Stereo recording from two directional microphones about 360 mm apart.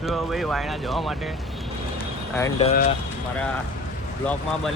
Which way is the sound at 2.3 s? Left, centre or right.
Centre.